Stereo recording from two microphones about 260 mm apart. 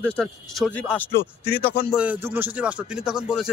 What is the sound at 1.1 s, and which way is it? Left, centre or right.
Speech, left.